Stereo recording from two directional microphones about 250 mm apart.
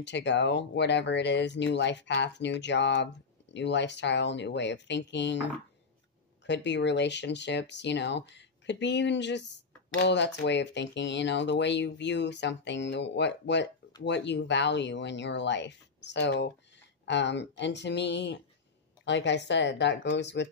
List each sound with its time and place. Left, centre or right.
0.0 s speech: left